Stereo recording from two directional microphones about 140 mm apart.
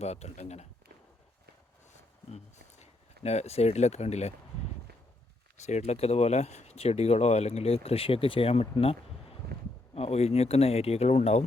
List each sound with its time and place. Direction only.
0.0 s speech: 50° left (ahead or behind)
1.9 s a sound: 55° left (ahead or behind)
3.2 s speech: 50° left (ahead or behind)
5.6 s speech: 50° left (ahead or behind)